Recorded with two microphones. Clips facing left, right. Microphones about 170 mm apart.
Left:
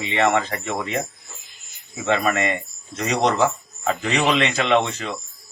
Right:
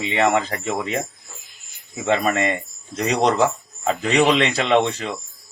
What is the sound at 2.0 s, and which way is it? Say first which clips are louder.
Speech: right 1 dB; 35° right (ahead or behind).